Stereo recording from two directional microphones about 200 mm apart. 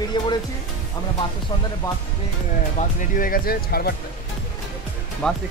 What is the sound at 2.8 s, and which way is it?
Speech, 35° left (ahead or behind).